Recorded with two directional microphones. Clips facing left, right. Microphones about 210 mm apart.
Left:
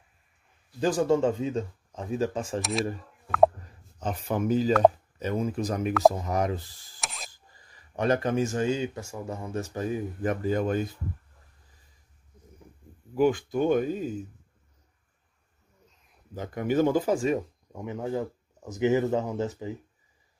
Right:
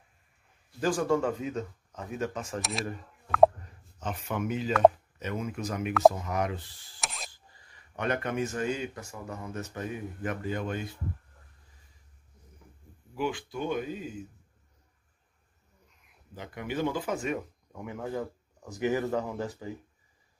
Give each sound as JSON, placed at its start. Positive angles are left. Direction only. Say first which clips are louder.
{"t": 0.7, "sound": "speech", "louder": "left 3 dB", "side_deg": 20}
{"t": 2.6, "sound": "speech", "louder": "left 8 dB", "side_deg": 0}
{"t": 3.3, "sound": "plop", "louder": "even", "side_deg": 0}
{"t": 4.0, "sound": "speech", "louder": "left 4 dB", "side_deg": 35}
{"t": 7.0, "sound": "a sound", "louder": "even", "side_deg": 0}
{"t": 7.2, "sound": "speech", "louder": "even", "side_deg": 40}
{"t": 13.1, "sound": "speech", "louder": "left 9 dB", "side_deg": 45}
{"t": 16.3, "sound": "speech", "louder": "left 8 dB", "side_deg": 45}